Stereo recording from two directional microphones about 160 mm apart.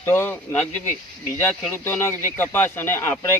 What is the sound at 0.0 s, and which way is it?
Speech, 15° left (ahead or behind).